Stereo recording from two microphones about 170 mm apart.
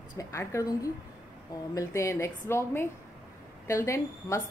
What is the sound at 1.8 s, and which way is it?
A woman's voice, 15° left (ahead or behind).